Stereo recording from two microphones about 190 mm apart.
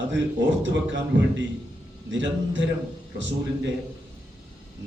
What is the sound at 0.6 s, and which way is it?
A man's voice, 75° right (ahead or behind).